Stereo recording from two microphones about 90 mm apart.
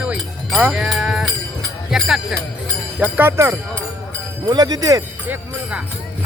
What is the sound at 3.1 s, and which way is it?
Speech, 25° right (ahead or behind).